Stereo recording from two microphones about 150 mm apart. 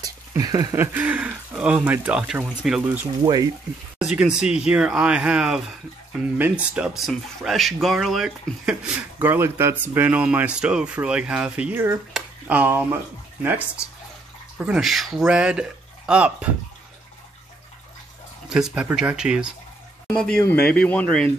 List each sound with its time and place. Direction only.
0.0 s speech: 25° right (ahead or behind); by 3.1 s 10° right (ahead or behind)
3.2 s speech: 25° right (ahead or behind)
4.0 s speech: 5° right (ahead or behind)
18.5 s speech: 5° right (ahead or behind)